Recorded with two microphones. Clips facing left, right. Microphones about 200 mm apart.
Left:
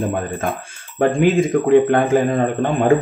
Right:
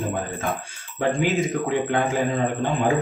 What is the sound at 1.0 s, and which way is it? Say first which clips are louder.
Speech: left 7 dB; 55° left (ahead or behind).